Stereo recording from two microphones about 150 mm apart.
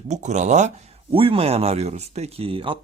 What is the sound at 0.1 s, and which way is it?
Speech, 50° right (ahead or behind).